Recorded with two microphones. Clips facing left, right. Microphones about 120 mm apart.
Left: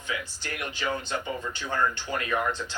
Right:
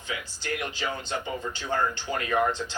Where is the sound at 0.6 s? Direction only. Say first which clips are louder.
Left 1 dB; 30° right (ahead or behind).